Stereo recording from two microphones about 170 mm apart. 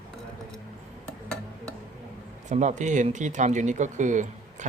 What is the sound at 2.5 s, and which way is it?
Speech, 45° right (ahead or behind).